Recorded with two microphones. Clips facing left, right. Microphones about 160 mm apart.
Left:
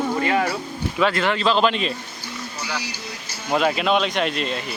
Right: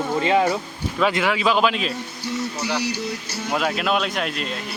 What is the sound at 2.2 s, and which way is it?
Speech, 70° right (ahead or behind).